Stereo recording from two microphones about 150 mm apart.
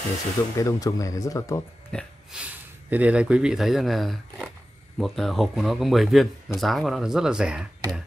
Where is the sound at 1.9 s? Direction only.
5° left (ahead or behind).